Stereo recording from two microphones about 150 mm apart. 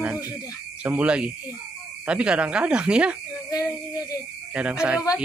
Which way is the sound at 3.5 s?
25° left (ahead or behind).